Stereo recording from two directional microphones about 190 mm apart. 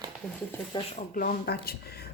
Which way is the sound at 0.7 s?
25° left (ahead or behind).